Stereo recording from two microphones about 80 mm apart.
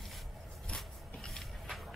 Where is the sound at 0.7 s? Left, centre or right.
Centre.